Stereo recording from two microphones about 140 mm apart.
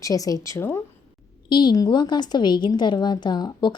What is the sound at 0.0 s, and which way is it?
Speech, 25° left (ahead or behind).